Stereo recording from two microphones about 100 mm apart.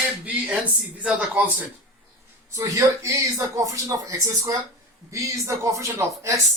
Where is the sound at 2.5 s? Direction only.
35° right (ahead or behind).